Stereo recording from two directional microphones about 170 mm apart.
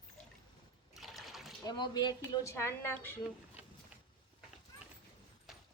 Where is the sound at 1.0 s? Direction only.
Centre (ahead or behind).